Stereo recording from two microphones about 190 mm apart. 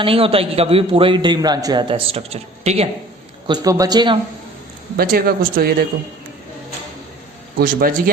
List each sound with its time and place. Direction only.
0.0 s a man's voice: 30° right (ahead or behind)
3.4 s a man's voice: 20° right (ahead or behind)
4.9 s speech: 50° right (ahead or behind)
7.6 s speech: 50° right (ahead or behind)